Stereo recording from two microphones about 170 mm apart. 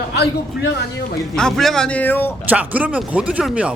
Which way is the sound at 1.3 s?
Centre (ahead or behind).